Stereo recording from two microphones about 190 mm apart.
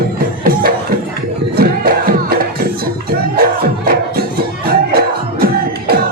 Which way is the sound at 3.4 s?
50° right (ahead or behind).